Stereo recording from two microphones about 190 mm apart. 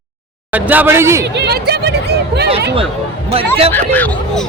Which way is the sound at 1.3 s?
60° right (ahead or behind).